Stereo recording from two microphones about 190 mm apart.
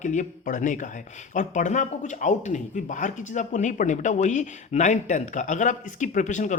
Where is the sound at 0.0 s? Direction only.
40° left (ahead or behind).